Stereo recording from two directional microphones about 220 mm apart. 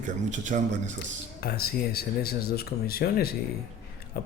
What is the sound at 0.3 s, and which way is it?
Speech, 35° right (ahead or behind).